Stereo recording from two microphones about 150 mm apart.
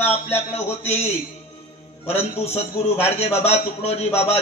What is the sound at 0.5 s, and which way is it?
Speech, 45° left (ahead or behind).